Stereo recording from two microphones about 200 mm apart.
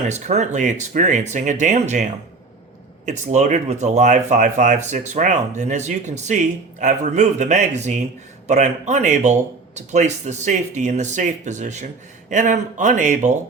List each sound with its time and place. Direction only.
0.1 s speech: 35° right (ahead or behind)
3.1 s speech: 35° right (ahead or behind)